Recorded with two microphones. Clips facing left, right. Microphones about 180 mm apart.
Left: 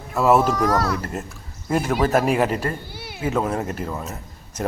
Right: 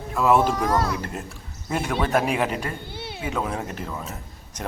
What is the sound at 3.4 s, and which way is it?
Speech, centre (ahead or behind).